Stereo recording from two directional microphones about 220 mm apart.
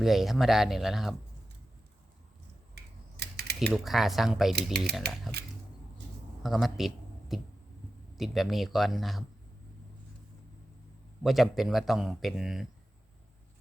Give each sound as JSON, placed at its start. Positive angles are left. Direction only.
{"t": 0.0, "sound": "speech", "side_deg": 0}
{"t": 2.7, "sound": "typing", "side_deg": -50}
{"t": 3.7, "sound": "speech", "side_deg": 0}
{"t": 5.3, "sound": "a sound", "side_deg": -45}
{"t": 6.4, "sound": "speech", "side_deg": 0}
{"t": 11.2, "sound": "speech", "side_deg": 0}